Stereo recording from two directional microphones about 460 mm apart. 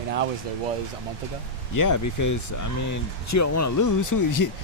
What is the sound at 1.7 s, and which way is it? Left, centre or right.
Speech, left.